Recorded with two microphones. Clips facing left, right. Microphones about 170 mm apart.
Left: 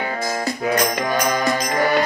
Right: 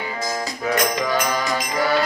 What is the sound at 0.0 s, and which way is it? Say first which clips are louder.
Music: left 3 dB; 60° left (ahead or behind).